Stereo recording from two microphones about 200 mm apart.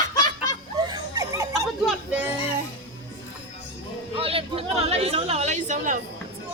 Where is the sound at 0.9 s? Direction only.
15° right (ahead or behind).